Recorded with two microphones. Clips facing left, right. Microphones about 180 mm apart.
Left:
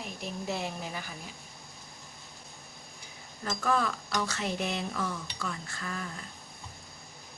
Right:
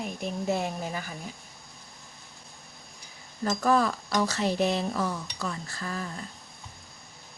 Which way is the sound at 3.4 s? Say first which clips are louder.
Right 5 dB; 40° right (ahead or behind).